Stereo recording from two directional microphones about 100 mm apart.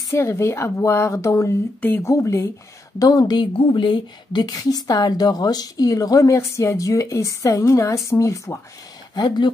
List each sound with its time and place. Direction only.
0.1 s speech: 25° left (ahead or behind)
1.8 s speech: 20° left (ahead or behind)
2.0 s a woman's voice: 30° left (ahead or behind)
3.5 s a woman's voice: 55° left (ahead or behind); by 8.5 s 30° left (ahead or behind)
9.1 s speech: 45° left (ahead or behind)